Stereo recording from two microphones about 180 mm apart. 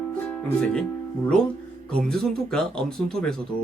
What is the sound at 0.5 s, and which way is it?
Speech, 5° left (ahead or behind).